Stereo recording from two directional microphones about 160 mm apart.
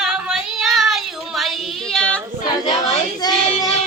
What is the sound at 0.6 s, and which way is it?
Child singing, centre (ahead or behind).